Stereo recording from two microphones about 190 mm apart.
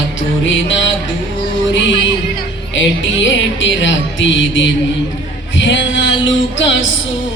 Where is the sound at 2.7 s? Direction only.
75° left (ahead or behind).